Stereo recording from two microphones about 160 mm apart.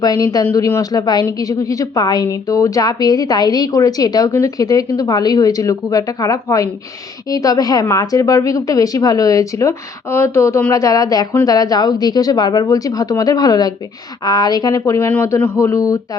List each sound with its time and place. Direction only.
0.0 s a woman's voice: 25° left (ahead or behind)